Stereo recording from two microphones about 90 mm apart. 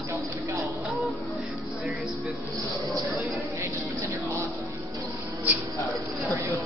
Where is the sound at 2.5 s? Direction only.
40° right (ahead or behind).